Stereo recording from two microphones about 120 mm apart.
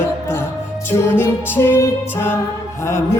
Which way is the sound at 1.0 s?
20° left (ahead or behind).